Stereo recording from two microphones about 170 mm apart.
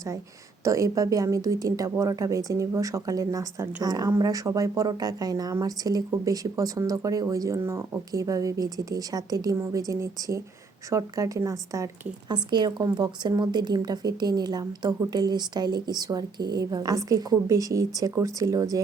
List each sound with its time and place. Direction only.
0.6 s speech: 20° right (ahead or behind)